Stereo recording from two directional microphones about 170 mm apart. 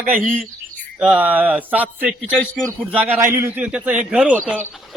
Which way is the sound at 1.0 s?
10° right (ahead or behind).